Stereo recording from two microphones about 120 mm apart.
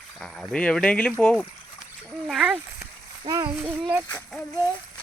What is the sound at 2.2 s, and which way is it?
Speech, 5° right (ahead or behind).